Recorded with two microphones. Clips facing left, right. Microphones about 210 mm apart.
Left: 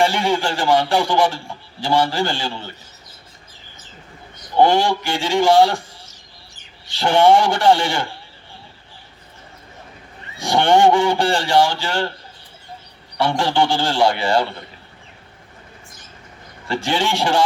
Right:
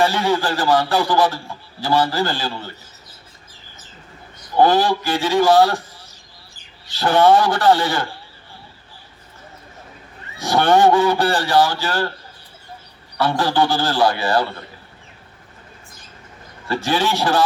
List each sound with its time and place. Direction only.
0.2 s a man's voice: 25° left (ahead or behind)
4.5 s a man's voice: 25° left (ahead or behind)
7.0 s a man's voice: 25° left (ahead or behind)
10.4 s a man's voice: 25° left (ahead or behind)
13.3 s a man's voice: 25° left (ahead or behind)
16.6 s a man's voice: 25° left (ahead or behind)